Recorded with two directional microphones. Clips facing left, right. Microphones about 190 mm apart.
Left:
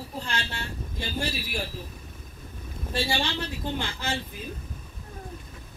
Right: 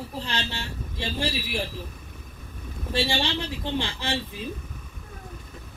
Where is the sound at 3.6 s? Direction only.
25° right (ahead or behind).